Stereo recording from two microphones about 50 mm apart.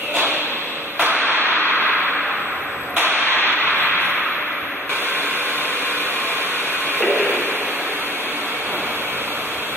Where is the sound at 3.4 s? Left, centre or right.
Left.